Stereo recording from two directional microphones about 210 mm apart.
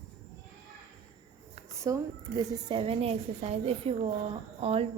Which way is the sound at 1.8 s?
15° right (ahead or behind).